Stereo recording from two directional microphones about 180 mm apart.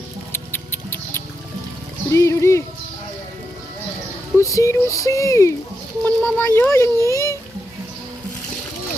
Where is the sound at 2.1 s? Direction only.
15° left (ahead or behind).